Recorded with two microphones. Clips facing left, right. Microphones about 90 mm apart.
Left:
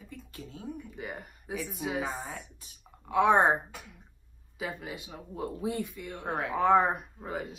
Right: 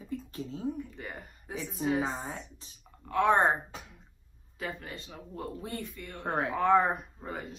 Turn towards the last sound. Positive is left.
turn(degrees=5)  # may be behind; listen again after turning